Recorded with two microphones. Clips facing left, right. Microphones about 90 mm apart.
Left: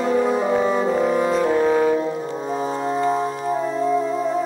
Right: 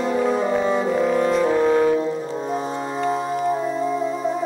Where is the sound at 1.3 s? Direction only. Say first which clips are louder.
Even; 5° left (ahead or behind).